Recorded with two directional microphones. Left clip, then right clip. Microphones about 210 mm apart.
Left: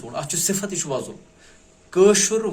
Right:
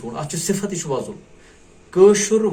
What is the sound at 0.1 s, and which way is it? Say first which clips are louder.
A man's voice: even; 55° left (ahead or behind).